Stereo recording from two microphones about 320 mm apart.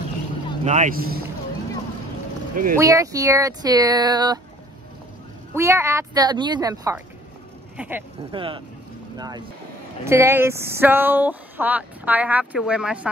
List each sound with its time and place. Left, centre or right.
0.7 s speech: right
2.5 s speech: right
2.8 s speech: centre
5.5 s speech: centre
8.3 s speech: centre